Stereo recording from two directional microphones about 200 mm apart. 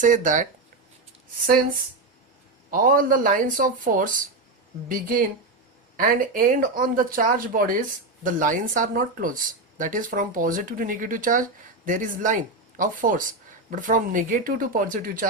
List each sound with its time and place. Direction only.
0.0 s speech: 40° right (ahead or behind)
2.6 s speech: 45° right (ahead or behind)